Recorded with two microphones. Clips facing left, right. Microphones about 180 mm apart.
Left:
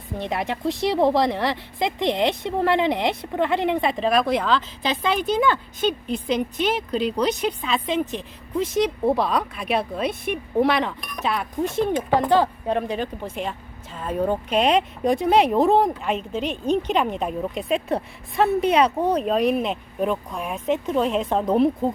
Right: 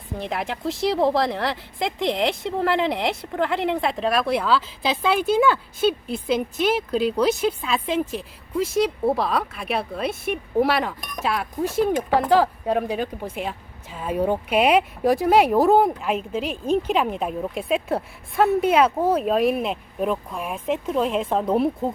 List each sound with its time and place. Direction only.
0.2 s a woman's voice: centre (ahead or behind)